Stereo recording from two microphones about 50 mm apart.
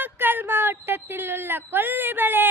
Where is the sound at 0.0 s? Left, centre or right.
Right.